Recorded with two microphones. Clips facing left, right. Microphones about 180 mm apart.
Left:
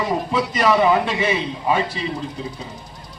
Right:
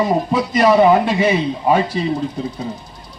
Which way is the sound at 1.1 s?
40° right (ahead or behind).